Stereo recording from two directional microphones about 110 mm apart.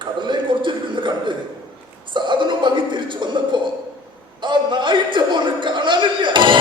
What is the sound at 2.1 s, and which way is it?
Speech, 45° right (ahead or behind).